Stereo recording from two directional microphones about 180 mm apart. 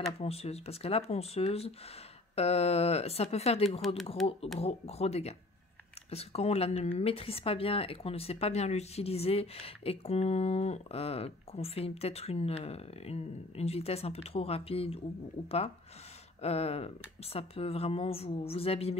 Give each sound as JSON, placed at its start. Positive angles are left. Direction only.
{"t": 0.2, "sound": "speech", "side_deg": 35}
{"t": 3.8, "sound": "speech", "side_deg": 0}
{"t": 4.6, "sound": "speech", "side_deg": 35}